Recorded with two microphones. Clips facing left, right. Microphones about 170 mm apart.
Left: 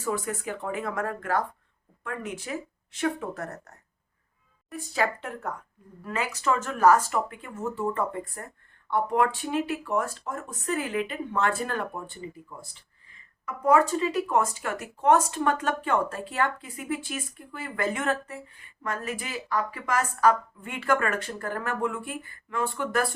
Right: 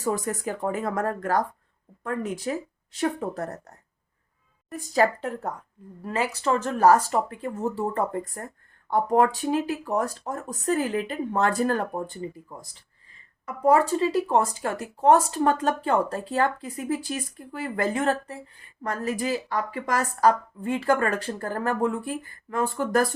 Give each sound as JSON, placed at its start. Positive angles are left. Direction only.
{"t": 0.0, "sound": "speech", "side_deg": -40}
{"t": 4.7, "sound": "speech", "side_deg": -40}